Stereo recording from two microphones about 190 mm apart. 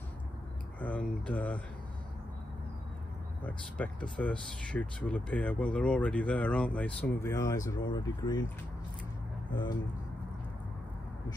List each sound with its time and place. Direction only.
0.7 s speech: 5° left (ahead or behind)
3.4 s speech: 5° left (ahead or behind)
9.5 s speech: 25° left (ahead or behind)